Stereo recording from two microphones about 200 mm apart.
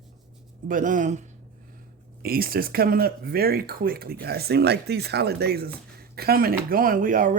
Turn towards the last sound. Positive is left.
turn(degrees=-45)  # may be behind; listen again after turning